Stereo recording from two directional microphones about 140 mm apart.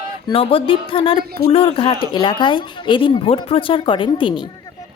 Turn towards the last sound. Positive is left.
turn(degrees=35)  # may be behind; listen again after turning